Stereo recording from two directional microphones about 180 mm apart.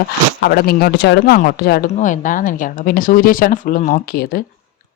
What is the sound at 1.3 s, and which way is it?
Speech, 55° left (ahead or behind).